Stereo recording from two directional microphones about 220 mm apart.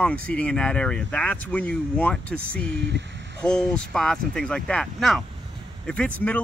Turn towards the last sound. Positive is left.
turn(degrees=5)  # may be behind; listen again after turning